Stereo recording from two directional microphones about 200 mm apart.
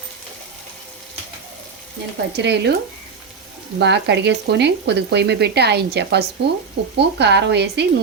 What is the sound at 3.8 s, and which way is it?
A woman's voice, 60° right (ahead or behind).